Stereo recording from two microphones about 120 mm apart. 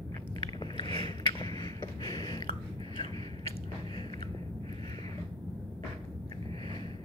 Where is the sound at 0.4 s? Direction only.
40° left (ahead or behind).